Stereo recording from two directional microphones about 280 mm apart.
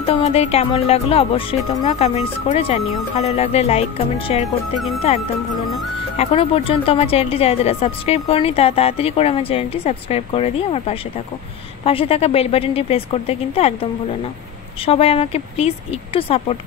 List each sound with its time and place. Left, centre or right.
0.0 s speech: left
14.9 s speech: left